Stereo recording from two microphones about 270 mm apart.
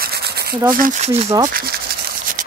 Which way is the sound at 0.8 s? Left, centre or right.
Right.